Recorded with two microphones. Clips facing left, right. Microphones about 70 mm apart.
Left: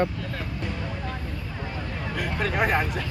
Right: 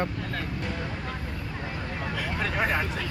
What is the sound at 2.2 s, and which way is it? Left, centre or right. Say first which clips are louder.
Speech: left 4 dB; centre.